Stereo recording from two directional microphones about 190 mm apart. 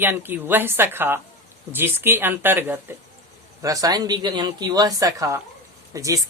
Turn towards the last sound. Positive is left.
turn(degrees=-15)  # may be behind; listen again after turning